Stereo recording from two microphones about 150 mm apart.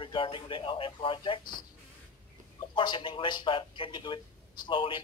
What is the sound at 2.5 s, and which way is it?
Speech, 30° left (ahead or behind).